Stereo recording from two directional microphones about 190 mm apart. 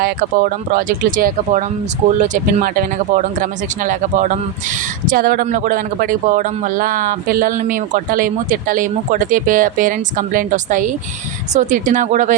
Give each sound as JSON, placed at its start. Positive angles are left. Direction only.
{"t": 0.0, "sound": "a man's voice", "side_deg": -50}